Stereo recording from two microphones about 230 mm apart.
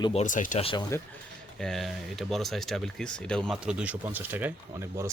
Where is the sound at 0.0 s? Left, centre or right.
Left.